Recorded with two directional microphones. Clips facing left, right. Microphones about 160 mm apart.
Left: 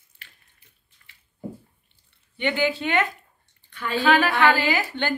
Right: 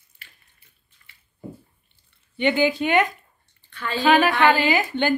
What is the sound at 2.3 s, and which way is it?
Speech, 15° right (ahead or behind).